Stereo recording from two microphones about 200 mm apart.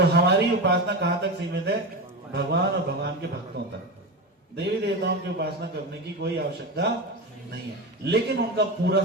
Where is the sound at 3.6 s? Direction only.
55° right (ahead or behind).